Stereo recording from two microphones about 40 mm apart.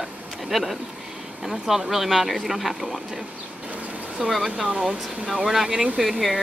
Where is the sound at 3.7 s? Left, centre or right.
Right.